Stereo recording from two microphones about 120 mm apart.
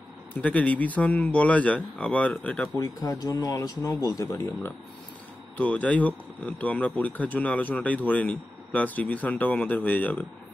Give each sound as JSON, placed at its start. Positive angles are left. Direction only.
{"t": 0.4, "sound": "speech", "side_deg": 10}
{"t": 2.8, "sound": "speech", "side_deg": 30}
{"t": 5.6, "sound": "speech", "side_deg": 10}